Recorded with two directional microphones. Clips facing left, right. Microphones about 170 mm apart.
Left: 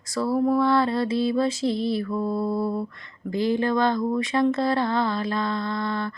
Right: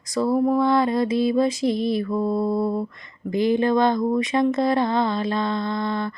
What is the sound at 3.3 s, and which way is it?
Speech, 15° right (ahead or behind).